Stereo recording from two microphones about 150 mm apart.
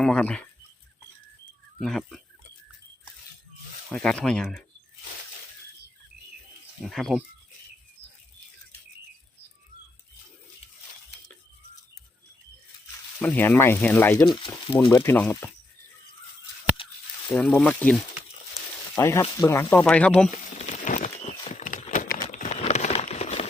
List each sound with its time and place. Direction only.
0.0 s speech: 5° left (ahead or behind)
1.8 s speech: centre (ahead or behind)
3.9 s speech: 5° left (ahead or behind)
6.8 s speech: centre (ahead or behind)
13.2 s speech: 10° left (ahead or behind)
16.8 s a sound: 35° left (ahead or behind)
17.3 s speech: 5° left (ahead or behind)
18.9 s speech: 20° left (ahead or behind)
20.7 s a sound: 60° left (ahead or behind)
22.1 s crumpling: 65° left (ahead or behind); by 23.5 s 45° left (ahead or behind)